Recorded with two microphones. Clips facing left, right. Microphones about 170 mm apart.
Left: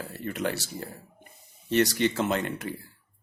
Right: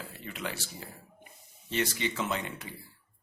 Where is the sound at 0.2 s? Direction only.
50° left (ahead or behind).